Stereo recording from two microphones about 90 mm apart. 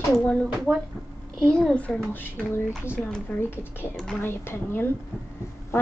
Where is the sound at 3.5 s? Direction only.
25° left (ahead or behind).